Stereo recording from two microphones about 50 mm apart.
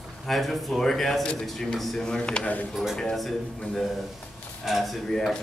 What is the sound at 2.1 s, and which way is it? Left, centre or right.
Speech, centre.